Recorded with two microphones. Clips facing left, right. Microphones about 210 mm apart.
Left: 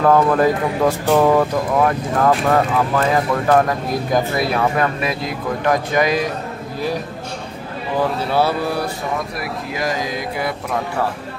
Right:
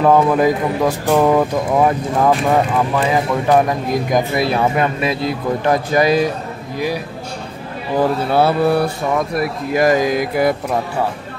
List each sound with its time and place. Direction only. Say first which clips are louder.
0.0 s speech: right 1 dB; 10° right (ahead or behind)
1.0 s speech: right 1 dB; centre (ahead or behind)
1.8 s speech: right 2 dB; 15° right (ahead or behind)
2.4 s speech: right 1 dB; centre (ahead or behind)
3.5 s speech: right 3 dB; 15° right (ahead or behind); by 6.2 s 30° right (ahead or behind)
8.3 s speech: right 2 dB; 55° right (ahead or behind)
9.8 s speech: right 10 dB; 50° right (ahead or behind)